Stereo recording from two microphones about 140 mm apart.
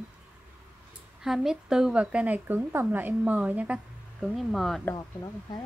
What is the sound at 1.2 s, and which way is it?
Speech, 5° right (ahead or behind).